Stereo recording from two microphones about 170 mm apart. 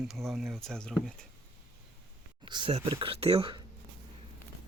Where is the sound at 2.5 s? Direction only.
25° right (ahead or behind).